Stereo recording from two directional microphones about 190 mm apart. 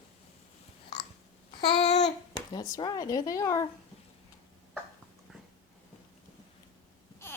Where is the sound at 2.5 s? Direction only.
25° left (ahead or behind).